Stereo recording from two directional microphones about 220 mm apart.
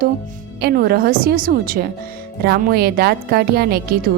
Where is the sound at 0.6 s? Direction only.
45° right (ahead or behind).